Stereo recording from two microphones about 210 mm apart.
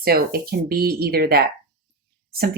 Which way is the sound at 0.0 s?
45° right (ahead or behind).